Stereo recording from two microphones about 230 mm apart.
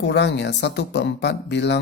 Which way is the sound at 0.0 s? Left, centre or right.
Left.